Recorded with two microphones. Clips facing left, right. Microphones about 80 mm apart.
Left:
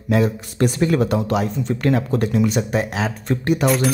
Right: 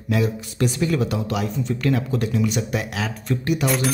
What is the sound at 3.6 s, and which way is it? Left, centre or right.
Speech, centre.